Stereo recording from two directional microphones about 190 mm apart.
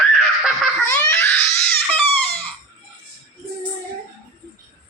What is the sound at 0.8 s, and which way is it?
Crying, 15° left (ahead or behind).